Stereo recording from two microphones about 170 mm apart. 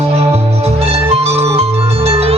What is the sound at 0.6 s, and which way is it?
Music, 35° right (ahead or behind).